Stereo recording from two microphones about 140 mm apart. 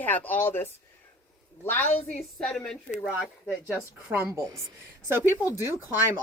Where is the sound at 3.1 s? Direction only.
5° right (ahead or behind).